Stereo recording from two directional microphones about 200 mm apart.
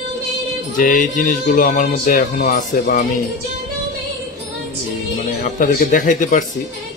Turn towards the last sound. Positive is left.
turn(degrees=40)  # may be behind; listen again after turning